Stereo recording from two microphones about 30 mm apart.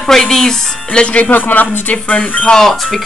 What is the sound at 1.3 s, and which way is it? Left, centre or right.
Speech, left.